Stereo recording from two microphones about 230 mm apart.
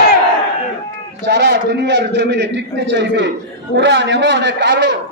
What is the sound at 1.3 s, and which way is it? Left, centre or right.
A man's voice, right.